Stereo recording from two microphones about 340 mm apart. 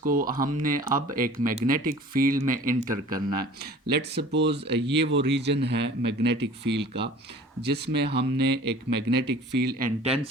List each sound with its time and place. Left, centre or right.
0.0 s speech: right
2.9 s speech: centre
3.3 s speech: right